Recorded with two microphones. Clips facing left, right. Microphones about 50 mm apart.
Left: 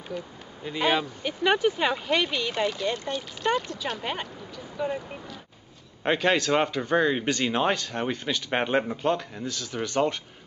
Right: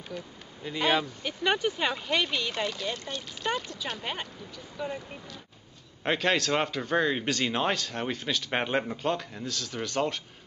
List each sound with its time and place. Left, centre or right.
0.1 s speech: centre